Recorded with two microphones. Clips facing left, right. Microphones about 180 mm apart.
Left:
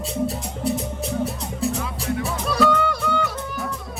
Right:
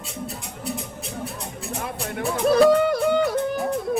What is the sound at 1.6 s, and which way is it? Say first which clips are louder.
Music: left 5 dB; 60° right (ahead or behind).